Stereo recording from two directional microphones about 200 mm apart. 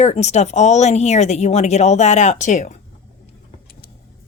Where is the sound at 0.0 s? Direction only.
35° left (ahead or behind).